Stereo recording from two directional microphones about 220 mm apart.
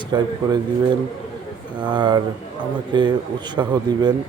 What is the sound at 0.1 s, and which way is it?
Speech, 20° right (ahead or behind).